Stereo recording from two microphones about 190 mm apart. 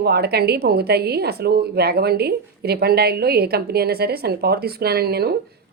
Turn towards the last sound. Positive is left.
turn(degrees=-55)  # may be behind; listen again after turning